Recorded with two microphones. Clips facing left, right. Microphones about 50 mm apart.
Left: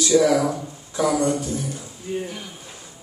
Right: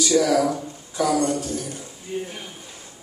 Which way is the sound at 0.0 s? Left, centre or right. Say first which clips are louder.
Left 1 dB; left.